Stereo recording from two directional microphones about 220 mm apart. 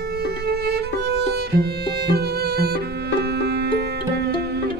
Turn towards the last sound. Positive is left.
turn(degrees=-45)  # may be behind; listen again after turning